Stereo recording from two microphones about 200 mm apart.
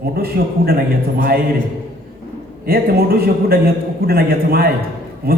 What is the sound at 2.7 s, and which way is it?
A man's voice, 50° right (ahead or behind).